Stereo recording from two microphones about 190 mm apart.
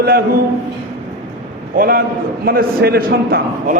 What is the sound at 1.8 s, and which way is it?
A man's voice, 50° right (ahead or behind).